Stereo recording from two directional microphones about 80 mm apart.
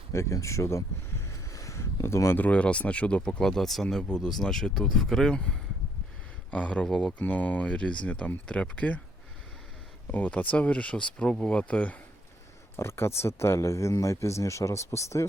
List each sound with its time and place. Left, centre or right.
0.1 s a sound: left
2.4 s speech: centre
10.1 s speech: centre
12.7 s speech: left